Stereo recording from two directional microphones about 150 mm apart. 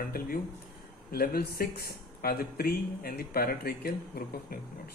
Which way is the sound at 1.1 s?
90° left.